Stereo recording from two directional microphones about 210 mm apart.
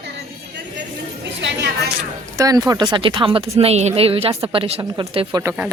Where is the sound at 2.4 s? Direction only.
15° right (ahead or behind).